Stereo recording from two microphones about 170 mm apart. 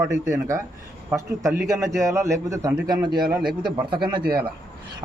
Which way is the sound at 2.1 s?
15° right (ahead or behind).